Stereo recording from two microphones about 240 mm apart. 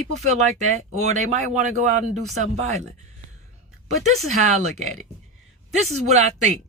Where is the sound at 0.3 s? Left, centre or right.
Right.